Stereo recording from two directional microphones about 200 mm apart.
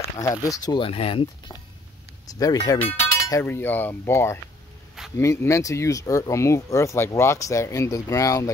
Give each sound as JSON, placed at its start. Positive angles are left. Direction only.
{"t": 0.2, "sound": "speech", "side_deg": 15}